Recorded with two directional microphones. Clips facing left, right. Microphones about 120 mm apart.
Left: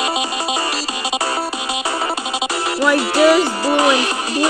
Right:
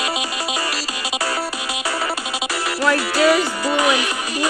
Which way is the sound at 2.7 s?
20° left (ahead or behind).